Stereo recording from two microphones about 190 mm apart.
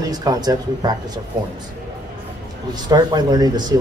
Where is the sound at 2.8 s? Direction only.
20° right (ahead or behind).